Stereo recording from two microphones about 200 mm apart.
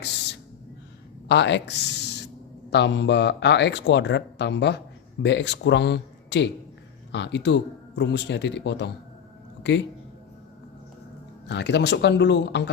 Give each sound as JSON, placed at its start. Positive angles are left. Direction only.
{"t": 1.3, "sound": "a man's voice", "side_deg": 60}
{"t": 11.4, "sound": "a man's voice", "side_deg": 60}